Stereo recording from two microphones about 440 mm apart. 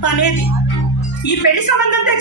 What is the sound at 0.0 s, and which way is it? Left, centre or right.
A man's voice, left.